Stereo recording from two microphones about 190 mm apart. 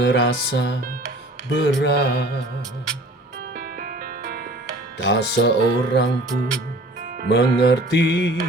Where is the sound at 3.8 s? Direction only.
45° right (ahead or behind).